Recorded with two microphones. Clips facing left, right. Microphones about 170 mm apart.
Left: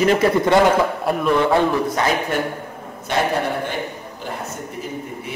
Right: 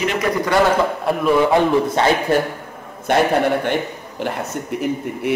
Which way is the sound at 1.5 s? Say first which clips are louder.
Right 2 dB; 25° right (ahead or behind).